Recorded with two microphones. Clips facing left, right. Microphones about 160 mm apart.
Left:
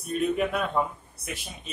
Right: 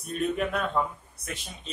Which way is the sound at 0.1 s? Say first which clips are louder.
Left 2 dB; 5° left (ahead or behind).